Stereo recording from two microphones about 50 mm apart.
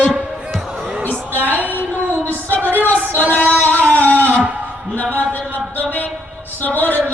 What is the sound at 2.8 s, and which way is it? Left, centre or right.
Female singing, left.